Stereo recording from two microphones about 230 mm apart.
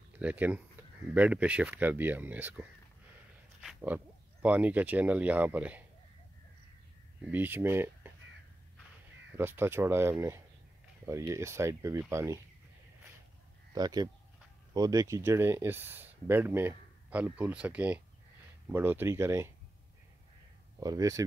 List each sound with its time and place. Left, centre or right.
0.2 s speech: centre
3.6 s speech: centre
7.2 s speech: centre
9.3 s speech: centre
13.7 s speech: centre
20.8 s speech: centre